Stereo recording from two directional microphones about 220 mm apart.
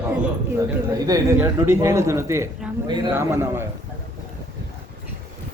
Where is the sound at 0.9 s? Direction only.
15° right (ahead or behind).